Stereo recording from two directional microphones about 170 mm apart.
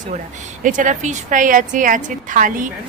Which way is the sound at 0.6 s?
50° right (ahead or behind).